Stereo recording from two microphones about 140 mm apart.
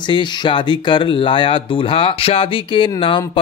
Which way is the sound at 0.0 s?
35° left (ahead or behind).